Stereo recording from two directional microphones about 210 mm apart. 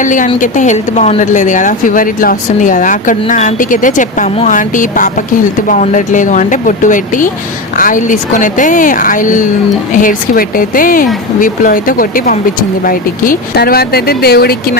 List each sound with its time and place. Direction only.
0.0 s a woman's voice: 35° left (ahead or behind)